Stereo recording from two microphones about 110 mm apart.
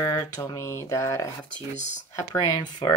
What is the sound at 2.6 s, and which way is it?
Speech, 40° left (ahead or behind).